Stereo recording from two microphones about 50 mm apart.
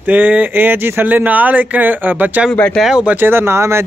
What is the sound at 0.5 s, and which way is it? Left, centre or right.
Speech, right.